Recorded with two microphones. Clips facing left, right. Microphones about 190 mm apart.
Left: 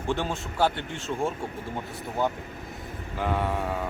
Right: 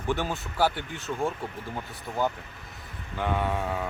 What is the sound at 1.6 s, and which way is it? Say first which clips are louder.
Speech: left 2 dB; 25° left (ahead or behind).